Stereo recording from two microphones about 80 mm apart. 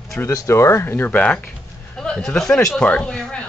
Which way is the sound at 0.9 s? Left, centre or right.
Left.